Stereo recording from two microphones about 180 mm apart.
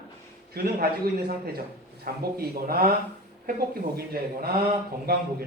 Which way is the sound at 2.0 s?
55° right (ahead or behind).